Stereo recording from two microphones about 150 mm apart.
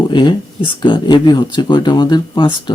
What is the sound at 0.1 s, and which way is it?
Speech, 30° left (ahead or behind).